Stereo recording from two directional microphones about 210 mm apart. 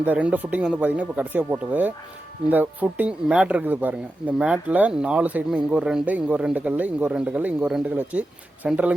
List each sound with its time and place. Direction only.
0.0 s speech: 5° right (ahead or behind)